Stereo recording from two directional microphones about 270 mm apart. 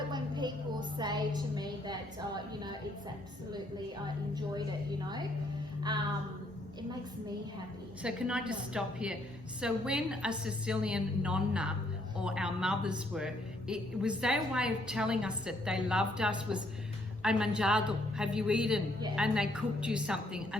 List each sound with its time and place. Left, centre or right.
0.1 s a sound: centre
4.0 s a woman's voice: centre
8.0 s a woman's voice: centre